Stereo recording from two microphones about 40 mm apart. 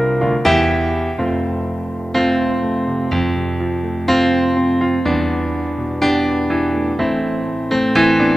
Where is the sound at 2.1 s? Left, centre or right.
Centre.